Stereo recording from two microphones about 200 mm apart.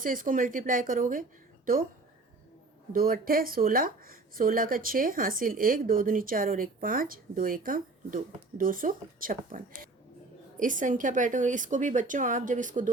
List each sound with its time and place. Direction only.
0.0 s speech: 40° right (ahead or behind)
2.9 s a woman's voice: 45° right (ahead or behind)